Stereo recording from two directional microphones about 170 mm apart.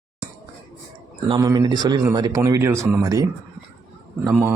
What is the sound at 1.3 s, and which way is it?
Speech, 20° right (ahead or behind).